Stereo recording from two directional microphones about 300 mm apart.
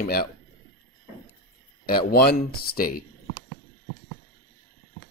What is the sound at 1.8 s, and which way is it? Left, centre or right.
Speech, left.